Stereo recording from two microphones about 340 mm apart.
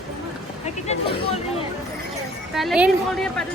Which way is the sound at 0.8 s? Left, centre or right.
Centre.